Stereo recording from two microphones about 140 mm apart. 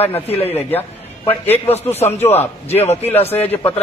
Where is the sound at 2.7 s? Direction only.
50° left (ahead or behind).